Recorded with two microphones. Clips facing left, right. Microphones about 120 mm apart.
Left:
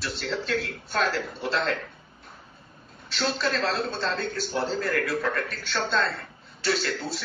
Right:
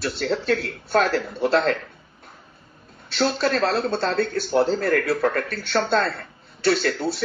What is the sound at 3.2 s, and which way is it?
Speech, 40° right (ahead or behind).